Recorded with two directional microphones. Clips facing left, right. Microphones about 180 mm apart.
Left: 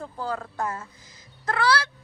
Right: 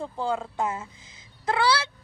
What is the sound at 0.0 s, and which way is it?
Speech, 25° right (ahead or behind).